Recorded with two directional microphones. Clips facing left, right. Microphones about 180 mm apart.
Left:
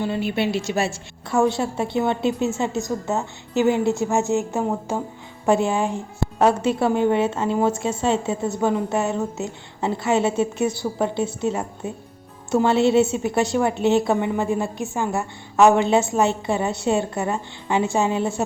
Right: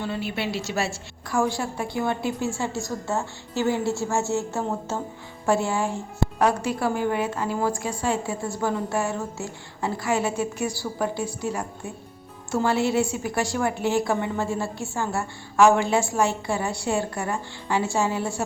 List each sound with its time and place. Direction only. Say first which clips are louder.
0.0 s a woman's voice: left 6 dB; 20° left (ahead or behind)